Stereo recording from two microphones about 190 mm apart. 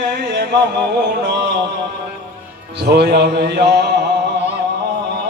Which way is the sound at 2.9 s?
60° right (ahead or behind).